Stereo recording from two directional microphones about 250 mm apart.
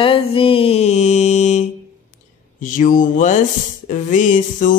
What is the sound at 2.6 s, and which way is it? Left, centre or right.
Music, left.